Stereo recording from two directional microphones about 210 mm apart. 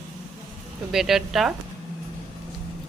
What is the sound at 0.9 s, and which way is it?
Speech, centre (ahead or behind).